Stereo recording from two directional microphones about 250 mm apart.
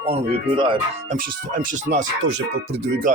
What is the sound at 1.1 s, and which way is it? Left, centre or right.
Speech, right.